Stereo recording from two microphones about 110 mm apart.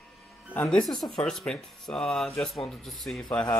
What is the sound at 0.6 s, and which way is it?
Speech, 5° left (ahead or behind).